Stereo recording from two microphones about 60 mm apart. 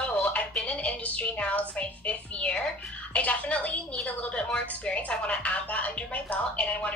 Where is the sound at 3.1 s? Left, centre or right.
Left.